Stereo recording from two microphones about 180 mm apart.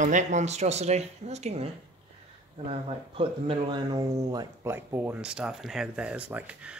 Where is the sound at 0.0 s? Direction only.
45° right (ahead or behind).